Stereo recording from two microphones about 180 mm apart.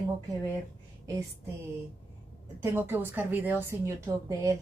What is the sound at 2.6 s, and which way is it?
A woman's voice, 10° right (ahead or behind).